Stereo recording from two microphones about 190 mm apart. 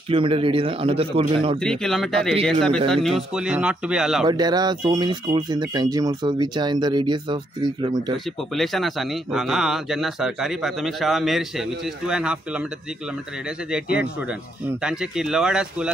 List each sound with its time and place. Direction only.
0.1 s speech: 25° right (ahead or behind)
1.6 s speech: 5° left (ahead or behind)
4.3 s speech: 20° right (ahead or behind)
8.5 s speech: centre (ahead or behind)
13.7 s speech: 5° right (ahead or behind)